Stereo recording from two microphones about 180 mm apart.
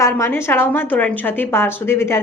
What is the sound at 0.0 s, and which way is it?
A woman's voice, 15° left (ahead or behind).